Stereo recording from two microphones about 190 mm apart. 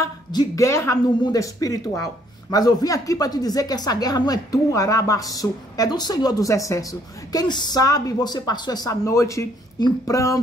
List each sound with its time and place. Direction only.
0.0 s speech: 20° left (ahead or behind)